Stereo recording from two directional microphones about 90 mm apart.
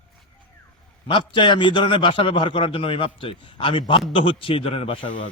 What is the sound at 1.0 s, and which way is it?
A man's voice, 65° left (ahead or behind).